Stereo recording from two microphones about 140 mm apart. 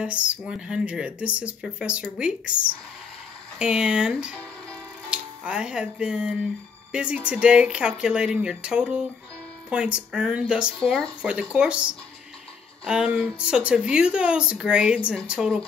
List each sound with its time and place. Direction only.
0.0 s a woman's voice: 10° right (ahead or behind)